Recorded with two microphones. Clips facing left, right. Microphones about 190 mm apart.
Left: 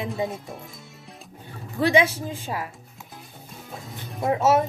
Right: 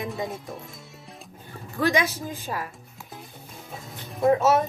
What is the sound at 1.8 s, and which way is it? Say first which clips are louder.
Speech: left 4 dB; 30° left (ahead or behind).